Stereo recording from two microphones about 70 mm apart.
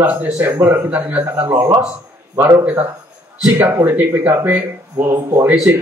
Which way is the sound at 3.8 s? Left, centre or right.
Right.